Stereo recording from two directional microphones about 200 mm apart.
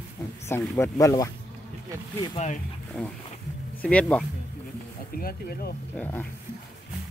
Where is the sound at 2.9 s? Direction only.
10° left (ahead or behind).